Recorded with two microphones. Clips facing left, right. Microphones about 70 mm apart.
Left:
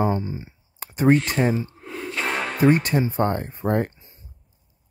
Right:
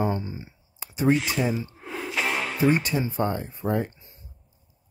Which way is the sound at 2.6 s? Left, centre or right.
Left.